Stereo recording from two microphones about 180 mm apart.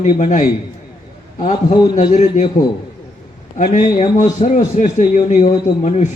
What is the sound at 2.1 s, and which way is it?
A man's voice, 40° left (ahead or behind).